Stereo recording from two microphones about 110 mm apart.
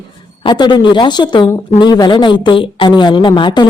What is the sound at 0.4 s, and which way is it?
A woman's voice, 45° left (ahead or behind).